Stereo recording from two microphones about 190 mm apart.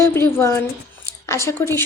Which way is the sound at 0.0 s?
15° left (ahead or behind).